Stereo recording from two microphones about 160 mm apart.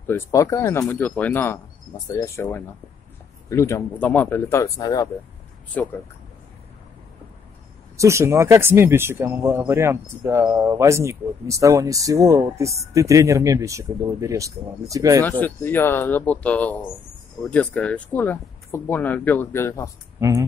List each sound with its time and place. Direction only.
0.0 s speech: 15° left (ahead or behind)
5.7 s speech: 10° left (ahead or behind)
8.0 s speech: 15° right (ahead or behind)
15.2 s speech: 10° left (ahead or behind)
20.2 s speech: 20° right (ahead or behind)